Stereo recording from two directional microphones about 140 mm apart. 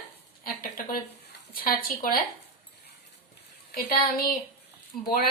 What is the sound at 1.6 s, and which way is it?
Speech, 90° left.